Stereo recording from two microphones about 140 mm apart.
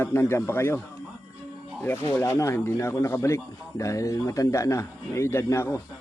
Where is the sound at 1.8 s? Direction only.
15° left (ahead or behind).